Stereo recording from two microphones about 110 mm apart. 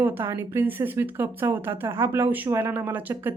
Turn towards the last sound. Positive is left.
turn(degrees=-15)  # may be behind; listen again after turning